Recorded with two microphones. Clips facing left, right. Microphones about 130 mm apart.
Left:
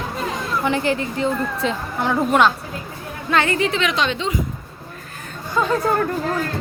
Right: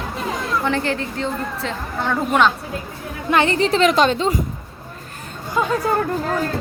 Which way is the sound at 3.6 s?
40° right (ahead or behind).